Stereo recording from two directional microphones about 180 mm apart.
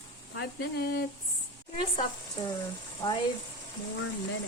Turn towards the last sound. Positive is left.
turn(degrees=15)  # may be behind; listen again after turning